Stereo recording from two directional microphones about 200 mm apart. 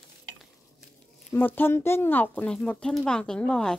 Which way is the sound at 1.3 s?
10° left (ahead or behind).